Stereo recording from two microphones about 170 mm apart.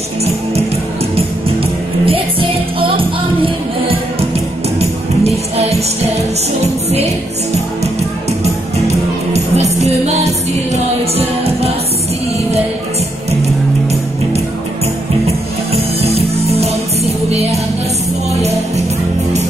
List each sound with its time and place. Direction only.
2.8 s music: 30° right (ahead or behind)
8.8 s music: 40° right (ahead or behind)
15.2 s music: 35° right (ahead or behind)